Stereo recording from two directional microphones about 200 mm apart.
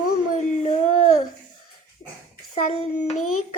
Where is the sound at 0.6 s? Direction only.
35° left (ahead or behind).